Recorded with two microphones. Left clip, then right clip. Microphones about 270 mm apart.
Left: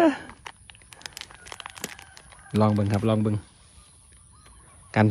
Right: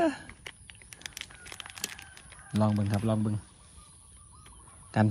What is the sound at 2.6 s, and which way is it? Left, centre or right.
Speech, right.